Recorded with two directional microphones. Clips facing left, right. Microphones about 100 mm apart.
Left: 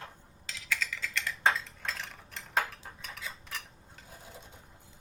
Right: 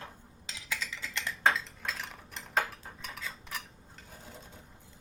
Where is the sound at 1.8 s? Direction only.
5° right (ahead or behind).